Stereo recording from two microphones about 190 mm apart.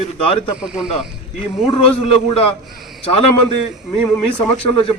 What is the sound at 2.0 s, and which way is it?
Speech, 30° left (ahead or behind).